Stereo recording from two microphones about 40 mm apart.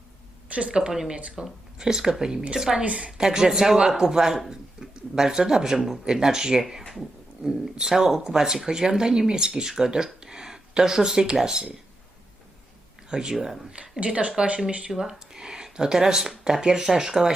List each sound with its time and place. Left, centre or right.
0.4 s a sound: right
1.1 s speech: right
1.8 s speech: centre
2.8 s speech: right
3.1 s speech: centre
4.4 s a sound: centre
4.9 s speech: centre
13.1 s speech: centre
14.0 s speech: right
14.9 s speech: centre